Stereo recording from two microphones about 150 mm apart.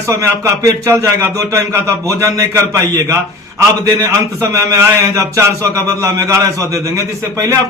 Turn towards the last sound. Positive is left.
turn(degrees=-20)  # may be behind; listen again after turning